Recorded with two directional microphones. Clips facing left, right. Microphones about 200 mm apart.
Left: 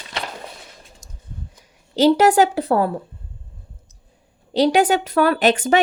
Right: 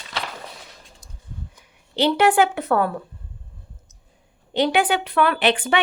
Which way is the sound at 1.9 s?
40° left (ahead or behind).